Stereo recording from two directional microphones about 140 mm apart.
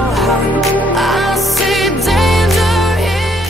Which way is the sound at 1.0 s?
Centre (ahead or behind).